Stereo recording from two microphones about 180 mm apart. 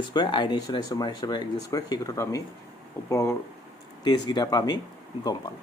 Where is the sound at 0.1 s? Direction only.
25° left (ahead or behind).